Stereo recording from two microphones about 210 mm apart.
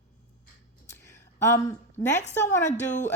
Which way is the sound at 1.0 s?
15° left (ahead or behind).